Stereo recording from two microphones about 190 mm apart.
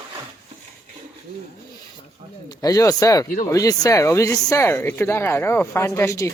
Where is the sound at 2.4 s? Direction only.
20° left (ahead or behind).